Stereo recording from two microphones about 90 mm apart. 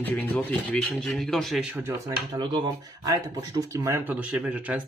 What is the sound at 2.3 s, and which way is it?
Speech, 55° right (ahead or behind).